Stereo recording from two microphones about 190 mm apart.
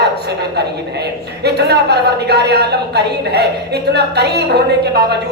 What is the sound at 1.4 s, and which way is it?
A woman's voice, 60° right (ahead or behind).